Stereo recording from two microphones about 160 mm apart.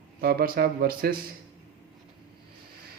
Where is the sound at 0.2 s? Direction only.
75° right (ahead or behind).